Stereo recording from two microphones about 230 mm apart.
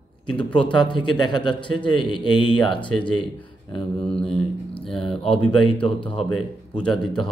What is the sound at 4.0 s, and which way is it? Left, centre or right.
Speech, centre.